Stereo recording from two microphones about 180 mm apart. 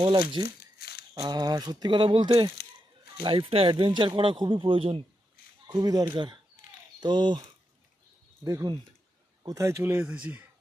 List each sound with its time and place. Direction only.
0.0 s speech: 25° right (ahead or behind)
0.4 s crumpling: 60° left (ahead or behind)
1.2 s speech: 20° right (ahead or behind)
8.4 s speech: 20° right (ahead or behind)